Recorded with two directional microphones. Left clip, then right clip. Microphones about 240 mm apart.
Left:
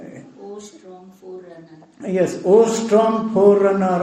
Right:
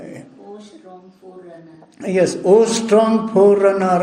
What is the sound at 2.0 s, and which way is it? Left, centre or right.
A man's voice, right.